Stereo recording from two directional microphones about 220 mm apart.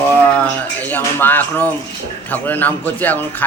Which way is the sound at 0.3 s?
5° left (ahead or behind).